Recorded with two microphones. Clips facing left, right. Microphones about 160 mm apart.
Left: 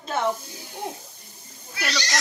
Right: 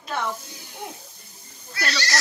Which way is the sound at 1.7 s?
20° left (ahead or behind).